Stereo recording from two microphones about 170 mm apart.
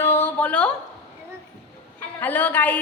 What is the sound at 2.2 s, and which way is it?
Speech, 10° left (ahead or behind).